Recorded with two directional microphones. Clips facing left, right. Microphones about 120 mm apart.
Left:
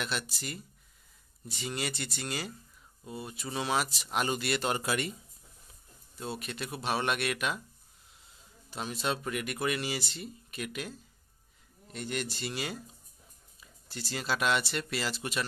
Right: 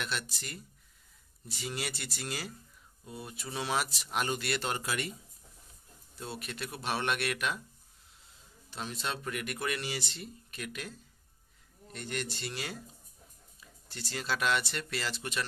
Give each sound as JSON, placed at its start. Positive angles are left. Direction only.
{"t": 0.0, "sound": "speech", "side_deg": 5}
{"t": 4.8, "sound": "speech", "side_deg": 20}
{"t": 6.1, "sound": "speech", "side_deg": 0}
{"t": 8.6, "sound": "speech", "side_deg": 10}